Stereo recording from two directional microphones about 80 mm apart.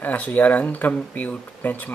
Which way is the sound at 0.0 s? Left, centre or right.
Centre.